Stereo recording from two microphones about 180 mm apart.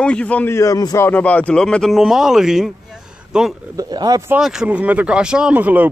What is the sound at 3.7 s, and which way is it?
Speech, 20° right (ahead or behind).